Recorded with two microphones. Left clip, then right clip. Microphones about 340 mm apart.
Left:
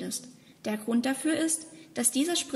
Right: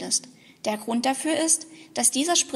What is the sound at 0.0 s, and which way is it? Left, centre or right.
A woman's voice, centre.